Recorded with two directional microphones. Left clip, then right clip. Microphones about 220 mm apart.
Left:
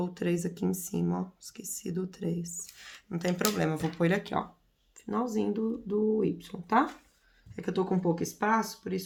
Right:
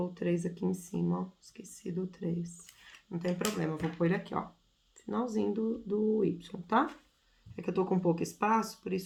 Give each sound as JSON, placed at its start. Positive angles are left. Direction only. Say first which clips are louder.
{"t": 0.0, "sound": "speech", "louder": "left 2 dB", "side_deg": 35}
{"t": 5.0, "sound": "speech", "louder": "left 2 dB", "side_deg": 25}